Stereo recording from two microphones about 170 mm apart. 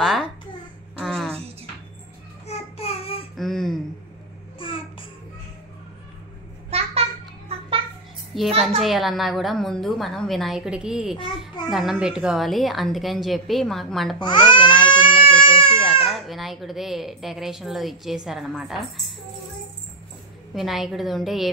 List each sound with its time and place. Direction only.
0.9 s a sound: 5° left (ahead or behind)
2.4 s child singing: 35° left (ahead or behind)
3.3 s a sound: centre (ahead or behind)
4.6 s music: 30° left (ahead or behind)
6.7 s a sound: 35° right (ahead or behind)
8.5 s a woman's voice: 35° right (ahead or behind)
8.8 s speech: centre (ahead or behind)
14.2 s speech: 25° left (ahead or behind)
14.9 s baby cry: 30° left (ahead or behind)
16.1 s speech: centre (ahead or behind)
20.5 s speech: centre (ahead or behind)